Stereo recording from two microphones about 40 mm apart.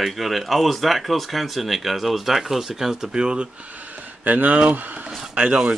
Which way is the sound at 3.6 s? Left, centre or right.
Right.